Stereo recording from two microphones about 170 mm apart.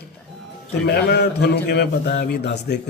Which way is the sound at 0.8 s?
75° left (ahead or behind).